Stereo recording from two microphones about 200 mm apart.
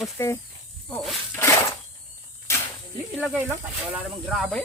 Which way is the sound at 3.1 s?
Centre (ahead or behind).